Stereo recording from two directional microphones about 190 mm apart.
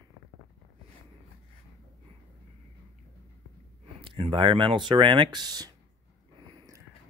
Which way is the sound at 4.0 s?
25° right (ahead or behind).